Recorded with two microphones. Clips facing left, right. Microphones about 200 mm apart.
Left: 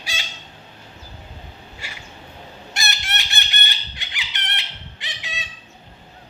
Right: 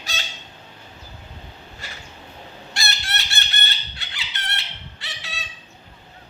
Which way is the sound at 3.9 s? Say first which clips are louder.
Left 1 dB; 15° left (ahead or behind).